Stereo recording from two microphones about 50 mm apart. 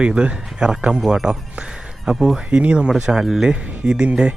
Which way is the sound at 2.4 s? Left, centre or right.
Right.